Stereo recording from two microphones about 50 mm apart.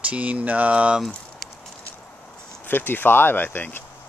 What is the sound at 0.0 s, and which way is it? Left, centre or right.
Mantra, right.